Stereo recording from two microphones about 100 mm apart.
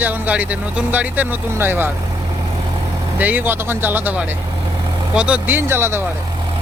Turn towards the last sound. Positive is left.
turn(degrees=-25)  # may be behind; listen again after turning